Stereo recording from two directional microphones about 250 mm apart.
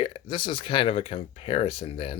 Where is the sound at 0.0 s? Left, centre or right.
Left.